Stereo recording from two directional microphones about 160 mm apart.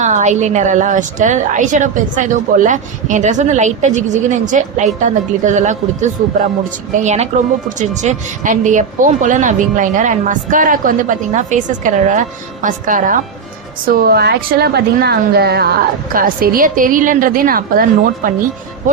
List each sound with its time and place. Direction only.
0.0 s a woman's voice: 50° right (ahead or behind)
13.8 s a woman's voice: 75° right (ahead or behind)
16.1 s a woman's voice: 65° right (ahead or behind)